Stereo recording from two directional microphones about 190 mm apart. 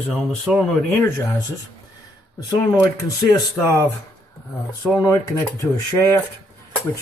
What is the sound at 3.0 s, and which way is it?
Speech, 15° left (ahead or behind).